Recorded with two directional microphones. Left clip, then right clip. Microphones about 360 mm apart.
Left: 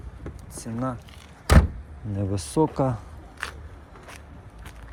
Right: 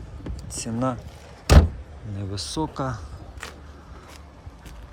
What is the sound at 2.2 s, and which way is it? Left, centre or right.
Speech, centre.